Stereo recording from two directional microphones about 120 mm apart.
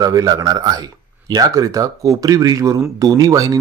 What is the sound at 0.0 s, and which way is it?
Speech, 30° right (ahead or behind).